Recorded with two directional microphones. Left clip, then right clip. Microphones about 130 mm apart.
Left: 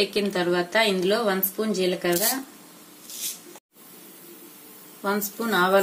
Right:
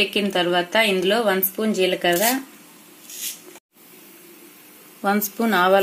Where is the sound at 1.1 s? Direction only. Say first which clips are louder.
Right 4 dB; 90° right.